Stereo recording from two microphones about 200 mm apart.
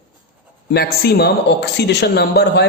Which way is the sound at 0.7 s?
50° left (ahead or behind).